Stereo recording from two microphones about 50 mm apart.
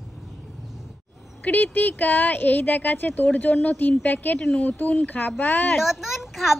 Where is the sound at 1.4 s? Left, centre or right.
Left.